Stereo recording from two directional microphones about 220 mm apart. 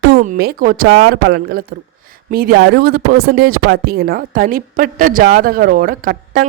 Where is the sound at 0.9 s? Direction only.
50° right (ahead or behind).